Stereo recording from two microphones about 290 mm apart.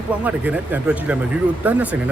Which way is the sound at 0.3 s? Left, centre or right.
Centre.